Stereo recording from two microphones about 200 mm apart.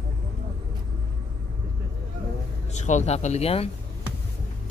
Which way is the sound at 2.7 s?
35° left (ahead or behind).